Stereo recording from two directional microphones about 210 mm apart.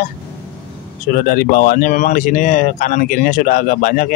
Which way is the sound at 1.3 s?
45° left (ahead or behind).